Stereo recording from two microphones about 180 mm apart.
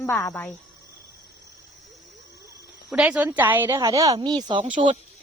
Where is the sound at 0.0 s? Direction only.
15° left (ahead or behind).